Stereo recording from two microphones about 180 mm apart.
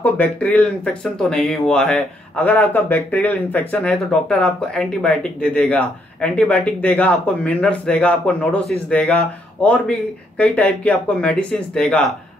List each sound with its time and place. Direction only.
0.0 s speech: 10° left (ahead or behind)